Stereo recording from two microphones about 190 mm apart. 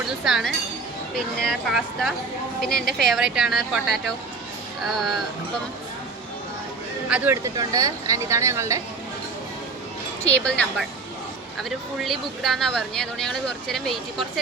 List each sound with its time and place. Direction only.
0.3 s speech: centre (ahead or behind)
4.9 s speech: centre (ahead or behind)
7.5 s speech: 20° right (ahead or behind)
10.4 s speech: 5° left (ahead or behind)
11.9 s speech: centre (ahead or behind)